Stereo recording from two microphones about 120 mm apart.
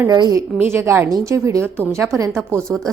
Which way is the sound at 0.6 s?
20° right (ahead or behind).